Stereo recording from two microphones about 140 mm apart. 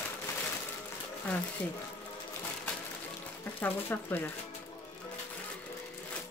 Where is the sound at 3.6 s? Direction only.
15° left (ahead or behind).